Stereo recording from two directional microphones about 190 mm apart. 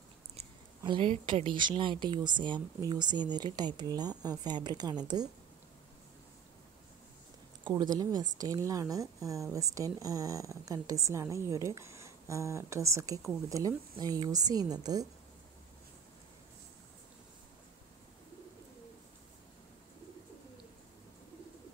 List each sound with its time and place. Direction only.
0.4 s a woman's voice: 25° right (ahead or behind)
7.6 s speech: 25° right (ahead or behind)